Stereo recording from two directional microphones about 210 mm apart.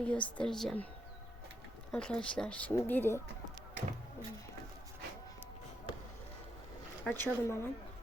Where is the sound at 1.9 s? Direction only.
5° left (ahead or behind).